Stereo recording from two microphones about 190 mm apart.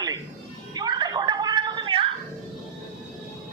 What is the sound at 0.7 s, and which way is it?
Gargling, 20° right (ahead or behind).